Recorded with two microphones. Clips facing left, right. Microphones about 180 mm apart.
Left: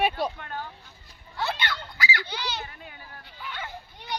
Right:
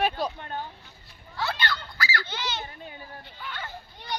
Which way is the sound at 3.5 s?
10° left (ahead or behind).